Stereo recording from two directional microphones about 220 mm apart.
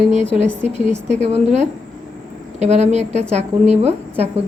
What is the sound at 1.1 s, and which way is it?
A woman's voice, 30° right (ahead or behind).